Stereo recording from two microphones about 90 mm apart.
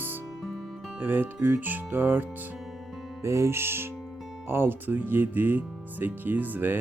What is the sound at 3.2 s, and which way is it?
Speech, 30° right (ahead or behind).